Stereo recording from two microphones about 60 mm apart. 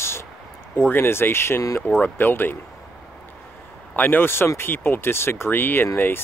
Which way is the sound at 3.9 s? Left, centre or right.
Left.